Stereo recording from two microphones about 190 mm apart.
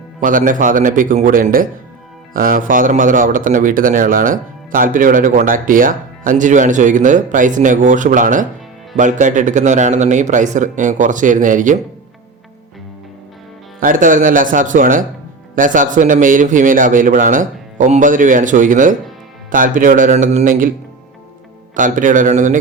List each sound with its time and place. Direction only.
0.2 s speech: 45° right (ahead or behind)
13.7 s speech: 45° right (ahead or behind)
21.8 s speech: 45° right (ahead or behind)